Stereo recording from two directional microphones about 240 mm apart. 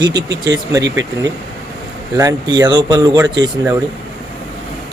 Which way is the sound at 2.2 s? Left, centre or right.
Centre.